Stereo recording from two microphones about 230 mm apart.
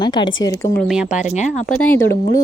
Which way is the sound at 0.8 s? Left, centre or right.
Centre.